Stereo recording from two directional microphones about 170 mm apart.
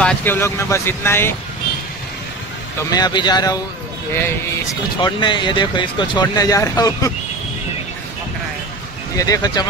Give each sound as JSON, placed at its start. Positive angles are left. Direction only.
{"t": 0.0, "sound": "speech", "side_deg": 10}
{"t": 2.9, "sound": "speech", "side_deg": 25}
{"t": 5.0, "sound": "speech", "side_deg": 25}
{"t": 9.1, "sound": "speech", "side_deg": 20}